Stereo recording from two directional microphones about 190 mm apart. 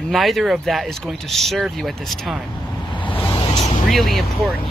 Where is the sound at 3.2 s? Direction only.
25° left (ahead or behind).